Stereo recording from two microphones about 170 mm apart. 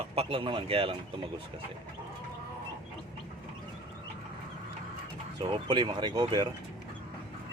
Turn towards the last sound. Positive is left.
turn(degrees=-25)  # may be behind; listen again after turning